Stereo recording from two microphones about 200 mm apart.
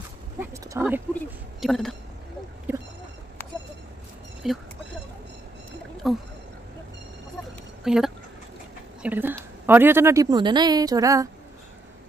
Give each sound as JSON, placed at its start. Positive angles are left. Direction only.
{"t": 0.4, "sound": "a woman's voice", "side_deg": -15}
{"t": 1.6, "sound": "speech", "side_deg": 0}
{"t": 2.7, "sound": "boat", "side_deg": -10}
{"t": 4.4, "sound": "speech", "side_deg": 0}
{"t": 6.0, "sound": "speech", "side_deg": 0}
{"t": 7.8, "sound": "a woman's voice", "side_deg": 0}